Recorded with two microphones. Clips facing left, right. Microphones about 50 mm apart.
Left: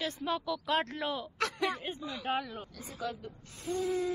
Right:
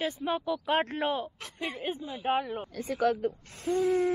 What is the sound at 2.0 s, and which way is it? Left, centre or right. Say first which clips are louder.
Speech: right 2 dB; left.